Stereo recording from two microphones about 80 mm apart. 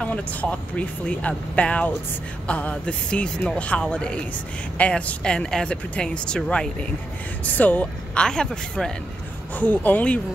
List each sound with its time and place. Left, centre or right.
0.0 s speech: centre